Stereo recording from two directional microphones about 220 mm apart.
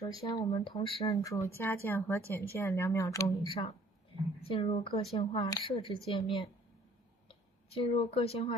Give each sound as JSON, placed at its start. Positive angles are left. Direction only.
{"t": 0.0, "sound": "a woman's voice", "side_deg": 15}
{"t": 0.5, "sound": "a woman's voice", "side_deg": 25}